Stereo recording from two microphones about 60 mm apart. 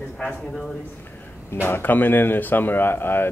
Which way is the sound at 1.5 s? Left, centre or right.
Left.